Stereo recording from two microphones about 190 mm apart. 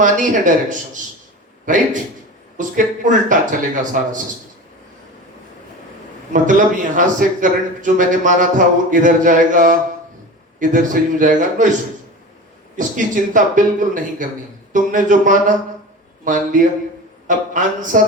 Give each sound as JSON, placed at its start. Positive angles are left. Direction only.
{"t": 0.0, "sound": "a man's voice", "side_deg": -40}
{"t": 6.3, "sound": "a man's voice", "side_deg": -40}
{"t": 13.3, "sound": "a man's voice", "side_deg": -45}